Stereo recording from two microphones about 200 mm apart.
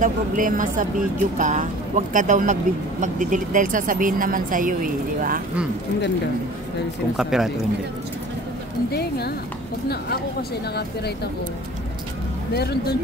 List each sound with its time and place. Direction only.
0.0 s speech: 40° right (ahead or behind)
7.2 s speech: centre (ahead or behind)
8.9 s speech: 55° left (ahead or behind)
12.5 s speech: 55° left (ahead or behind)